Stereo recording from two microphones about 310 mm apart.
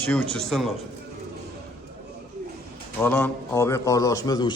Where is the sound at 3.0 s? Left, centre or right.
Centre.